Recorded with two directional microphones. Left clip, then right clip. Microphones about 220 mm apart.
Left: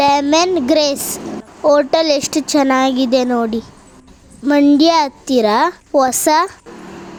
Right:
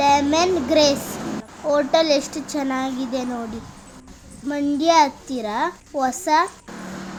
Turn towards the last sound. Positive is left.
turn(degrees=40)  # may be behind; listen again after turning